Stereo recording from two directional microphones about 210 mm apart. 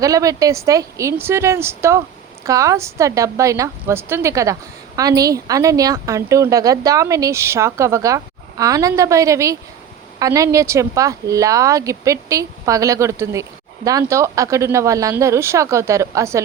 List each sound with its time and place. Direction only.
0.0 s speech: 15° right (ahead or behind)